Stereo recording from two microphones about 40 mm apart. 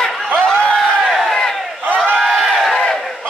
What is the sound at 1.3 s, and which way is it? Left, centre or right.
Battle cry, centre.